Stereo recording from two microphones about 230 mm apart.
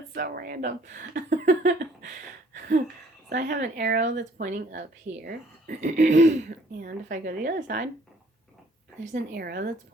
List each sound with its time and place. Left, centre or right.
0.1 s speech: right
2.6 s a sound: right
3.3 s speech: right
3.8 s speech: right
4.0 s speech: right
9.3 s speech: right